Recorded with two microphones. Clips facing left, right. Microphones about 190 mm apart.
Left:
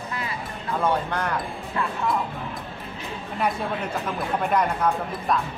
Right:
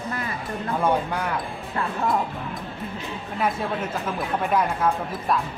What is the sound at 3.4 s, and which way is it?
Speech, centre (ahead or behind).